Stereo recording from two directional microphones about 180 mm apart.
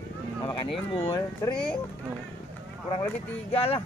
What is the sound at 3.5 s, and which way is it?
Speech, 35° left (ahead or behind).